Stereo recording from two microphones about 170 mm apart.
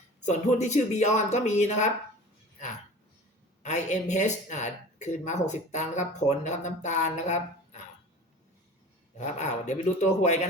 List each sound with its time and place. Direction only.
0.3 s speech: 40° left (ahead or behind)
3.6 s speech: 45° left (ahead or behind)
9.1 s speech: 45° left (ahead or behind)